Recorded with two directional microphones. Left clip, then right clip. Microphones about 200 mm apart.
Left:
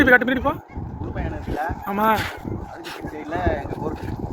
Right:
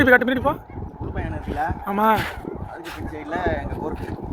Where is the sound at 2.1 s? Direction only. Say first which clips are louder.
Right 1 dB; 20° left (ahead or behind).